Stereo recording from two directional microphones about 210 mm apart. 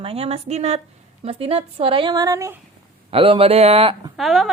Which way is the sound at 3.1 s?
25° right (ahead or behind).